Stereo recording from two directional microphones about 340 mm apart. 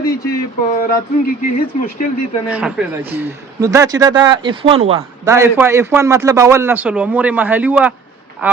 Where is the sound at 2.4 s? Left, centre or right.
Centre.